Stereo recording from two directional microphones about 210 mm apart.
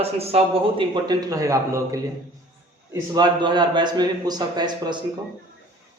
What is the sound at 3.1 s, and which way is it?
A man's voice, 20° right (ahead or behind).